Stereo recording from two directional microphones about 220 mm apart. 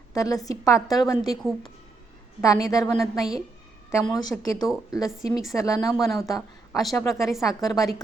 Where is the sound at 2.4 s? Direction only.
15° left (ahead or behind).